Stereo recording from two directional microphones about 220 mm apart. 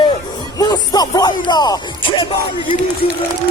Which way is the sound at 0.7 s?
15° left (ahead or behind).